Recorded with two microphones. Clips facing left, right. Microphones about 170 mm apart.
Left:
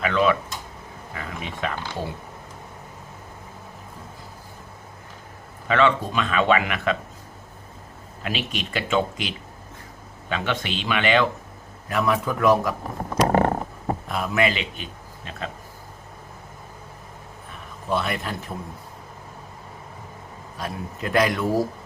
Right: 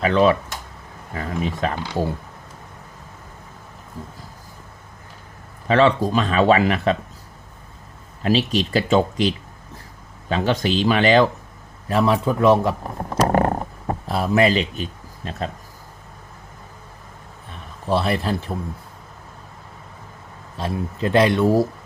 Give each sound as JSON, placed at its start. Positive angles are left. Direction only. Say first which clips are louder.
{"t": 0.0, "sound": "speech", "louder": "right 4 dB", "side_deg": -35}
{"t": 5.6, "sound": "speech", "louder": "right 4 dB", "side_deg": -35}
{"t": 8.2, "sound": "speech", "louder": "right 10 dB", "side_deg": -35}
{"t": 13.2, "sound": "a sound", "louder": "right 1 dB", "side_deg": -40}
{"t": 14.1, "sound": "speech", "louder": "right 6 dB", "side_deg": -35}
{"t": 17.8, "sound": "speech", "louder": "right 5 dB", "side_deg": -30}
{"t": 20.6, "sound": "speech", "louder": "right 6 dB", "side_deg": -30}